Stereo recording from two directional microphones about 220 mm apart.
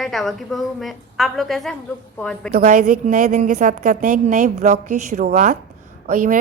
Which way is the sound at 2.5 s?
40° right (ahead or behind).